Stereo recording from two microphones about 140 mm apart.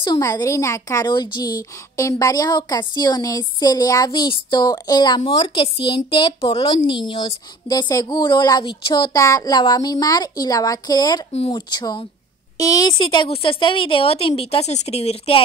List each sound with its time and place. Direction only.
0.0 s a woman's voice: 30° left (ahead or behind); by 15.4 s 45° left (ahead or behind)